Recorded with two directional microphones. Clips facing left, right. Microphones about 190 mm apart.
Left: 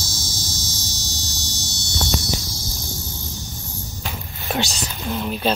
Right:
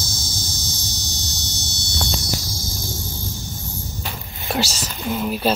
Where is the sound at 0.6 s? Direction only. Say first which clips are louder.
Even; 15° right (ahead or behind).